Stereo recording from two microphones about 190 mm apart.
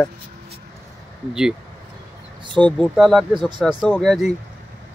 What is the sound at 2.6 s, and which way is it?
Speech, 5° left (ahead or behind).